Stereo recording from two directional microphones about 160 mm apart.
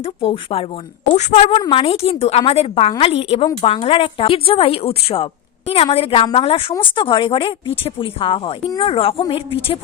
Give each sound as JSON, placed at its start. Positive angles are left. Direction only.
{"t": 0.0, "sound": "a woman's voice", "side_deg": 35}